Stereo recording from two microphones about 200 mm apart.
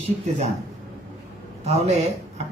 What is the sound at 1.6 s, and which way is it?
Speech, 35° right (ahead or behind).